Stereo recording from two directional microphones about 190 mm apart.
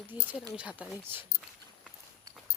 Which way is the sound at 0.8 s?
5° left (ahead or behind).